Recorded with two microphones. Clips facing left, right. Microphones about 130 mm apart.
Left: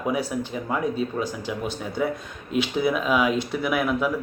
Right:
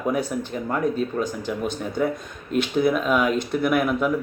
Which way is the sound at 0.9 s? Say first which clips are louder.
Right 2 dB; 50° right (ahead or behind).